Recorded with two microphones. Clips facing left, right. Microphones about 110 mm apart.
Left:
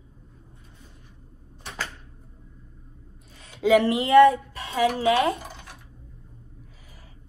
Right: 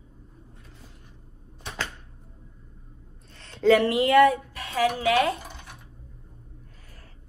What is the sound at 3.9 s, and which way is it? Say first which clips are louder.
Speech: left 3 dB; 25° left (ahead or behind).